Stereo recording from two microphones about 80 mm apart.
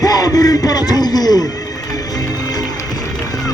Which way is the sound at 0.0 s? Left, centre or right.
Left.